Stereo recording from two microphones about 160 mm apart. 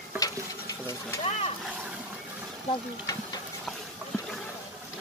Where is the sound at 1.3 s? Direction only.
40° left (ahead or behind).